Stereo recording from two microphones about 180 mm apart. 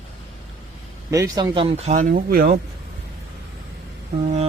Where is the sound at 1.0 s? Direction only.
15° right (ahead or behind); by 2.6 s 55° right (ahead or behind).